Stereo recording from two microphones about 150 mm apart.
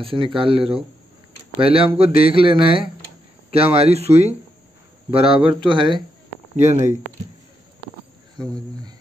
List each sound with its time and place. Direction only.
0.0 s speech: 35° right (ahead or behind)
6.5 s speech: 50° right (ahead or behind)
8.4 s cricket: 25° right (ahead or behind)